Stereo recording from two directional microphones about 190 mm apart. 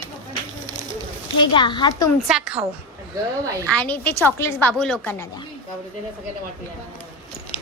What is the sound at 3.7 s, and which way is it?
A woman's voice, 5° left (ahead or behind).